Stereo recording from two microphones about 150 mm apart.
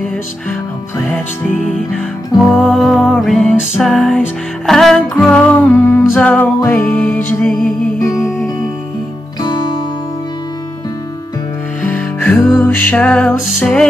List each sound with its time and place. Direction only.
2.3 s music: centre (ahead or behind)
9.4 s music: 30° left (ahead or behind)
11.9 s music: 10° left (ahead or behind)